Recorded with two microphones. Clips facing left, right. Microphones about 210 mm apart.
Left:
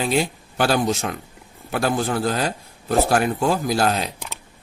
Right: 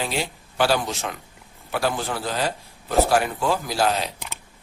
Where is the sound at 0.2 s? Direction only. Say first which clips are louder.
Left 2 dB; 45° left (ahead or behind).